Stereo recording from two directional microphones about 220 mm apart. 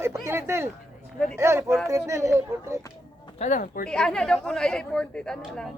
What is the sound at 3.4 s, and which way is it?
Speech, 35° left (ahead or behind).